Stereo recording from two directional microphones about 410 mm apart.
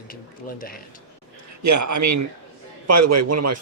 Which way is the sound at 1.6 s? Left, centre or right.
Right.